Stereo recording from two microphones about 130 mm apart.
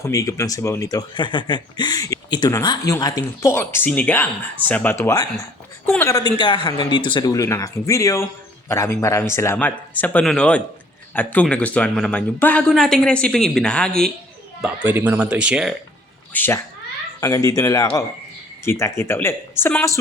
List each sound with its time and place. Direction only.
0.0 s speech: 25° left (ahead or behind); by 14.1 s 5° left (ahead or behind)
14.6 s speech: 15° right (ahead or behind)
16.3 s speech: 15° left (ahead or behind)
17.2 s speech: 25° left (ahead or behind)